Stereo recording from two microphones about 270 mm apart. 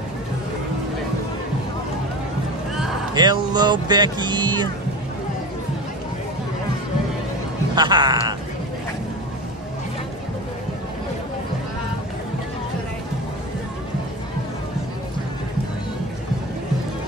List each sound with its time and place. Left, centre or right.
3.2 s speech: centre
7.7 s speech: centre